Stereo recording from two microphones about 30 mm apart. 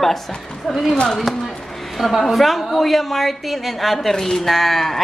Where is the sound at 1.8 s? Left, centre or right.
Centre.